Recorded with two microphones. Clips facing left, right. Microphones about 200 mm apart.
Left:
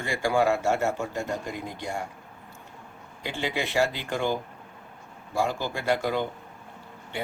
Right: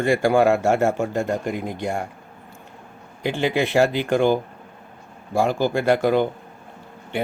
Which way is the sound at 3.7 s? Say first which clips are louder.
Right 7 dB; 55° right (ahead or behind).